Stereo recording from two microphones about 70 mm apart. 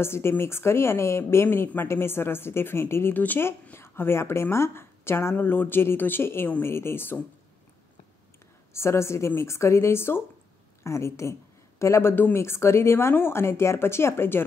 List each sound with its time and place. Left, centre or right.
0.0 s a woman's voice: left
3.2 s a woman's voice: left
8.7 s a woman's voice: left